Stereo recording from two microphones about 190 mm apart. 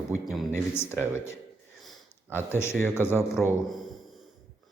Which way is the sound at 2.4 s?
10° left (ahead or behind).